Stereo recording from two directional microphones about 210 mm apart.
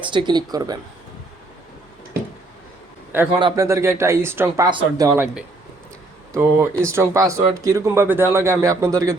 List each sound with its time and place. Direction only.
0.0 s speech: 25° right (ahead or behind)
3.4 s speech: 15° right (ahead or behind)